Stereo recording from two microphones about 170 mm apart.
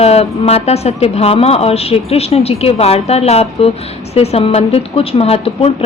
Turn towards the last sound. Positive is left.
turn(degrees=35)  # may be behind; listen again after turning